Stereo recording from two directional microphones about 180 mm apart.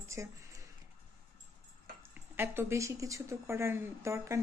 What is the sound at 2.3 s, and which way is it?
A woman's voice, 15° right (ahead or behind).